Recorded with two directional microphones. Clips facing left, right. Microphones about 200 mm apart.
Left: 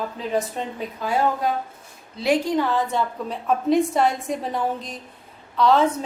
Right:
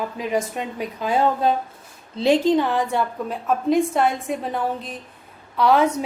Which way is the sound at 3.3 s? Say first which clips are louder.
Left 1 dB; centre (ahead or behind).